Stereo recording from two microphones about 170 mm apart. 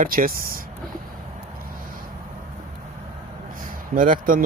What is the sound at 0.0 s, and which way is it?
Speech, 55° right (ahead or behind).